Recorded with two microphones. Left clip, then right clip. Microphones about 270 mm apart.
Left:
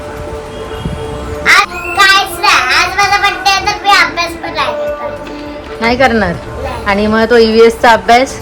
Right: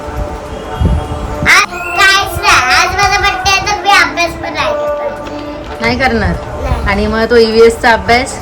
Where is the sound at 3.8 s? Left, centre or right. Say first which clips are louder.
Even; centre.